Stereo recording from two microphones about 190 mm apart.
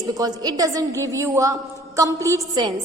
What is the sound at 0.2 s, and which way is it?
A woman's voice, 20° right (ahead or behind).